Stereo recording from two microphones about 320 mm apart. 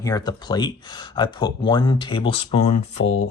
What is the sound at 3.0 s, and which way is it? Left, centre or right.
Speech, left.